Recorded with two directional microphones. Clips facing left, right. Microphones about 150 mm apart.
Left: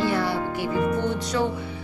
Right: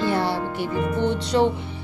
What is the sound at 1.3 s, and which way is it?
Music, 30° right (ahead or behind).